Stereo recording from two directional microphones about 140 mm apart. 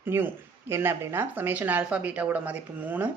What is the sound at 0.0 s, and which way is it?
A man's voice, 15° right (ahead or behind).